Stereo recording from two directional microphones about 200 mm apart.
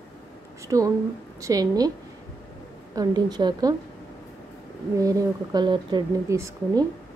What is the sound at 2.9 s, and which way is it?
Speech, 20° right (ahead or behind).